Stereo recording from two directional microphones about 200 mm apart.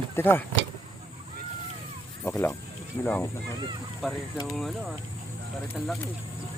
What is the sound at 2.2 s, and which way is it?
Speech, 10° left (ahead or behind).